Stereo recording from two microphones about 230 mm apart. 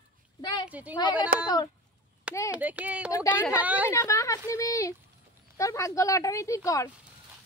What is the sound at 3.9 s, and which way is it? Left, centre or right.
Speech, centre.